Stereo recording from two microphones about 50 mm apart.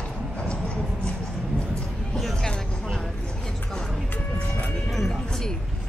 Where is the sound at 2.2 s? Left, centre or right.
Centre.